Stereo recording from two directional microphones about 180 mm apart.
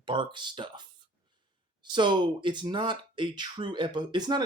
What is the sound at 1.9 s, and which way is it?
Speech, 25° right (ahead or behind).